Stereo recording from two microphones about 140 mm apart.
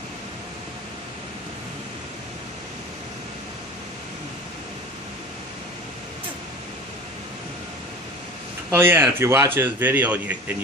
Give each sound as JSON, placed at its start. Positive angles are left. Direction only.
{"t": 8.7, "sound": "a man's voice", "side_deg": -15}